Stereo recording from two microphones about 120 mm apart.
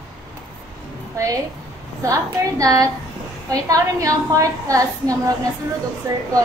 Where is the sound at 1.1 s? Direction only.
25° right (ahead or behind).